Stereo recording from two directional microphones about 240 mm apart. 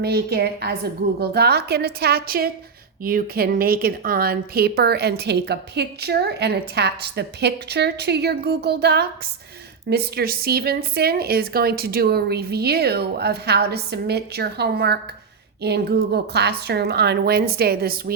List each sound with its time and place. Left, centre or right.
0.0 s a woman's voice: right